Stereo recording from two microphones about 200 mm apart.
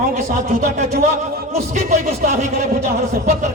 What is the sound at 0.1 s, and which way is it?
A man's voice, 35° right (ahead or behind).